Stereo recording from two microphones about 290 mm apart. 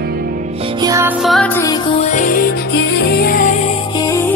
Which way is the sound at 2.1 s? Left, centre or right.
Left.